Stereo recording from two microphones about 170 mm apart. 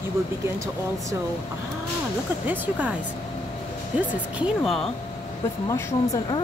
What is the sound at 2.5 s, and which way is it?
Speech, 10° right (ahead or behind).